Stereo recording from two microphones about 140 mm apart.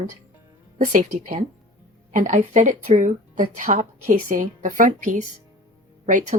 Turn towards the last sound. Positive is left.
turn(degrees=-60)  # may be behind; listen again after turning